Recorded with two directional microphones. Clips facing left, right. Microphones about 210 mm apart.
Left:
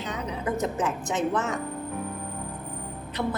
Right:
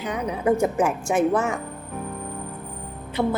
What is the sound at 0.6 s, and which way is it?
Speech, 10° right (ahead or behind).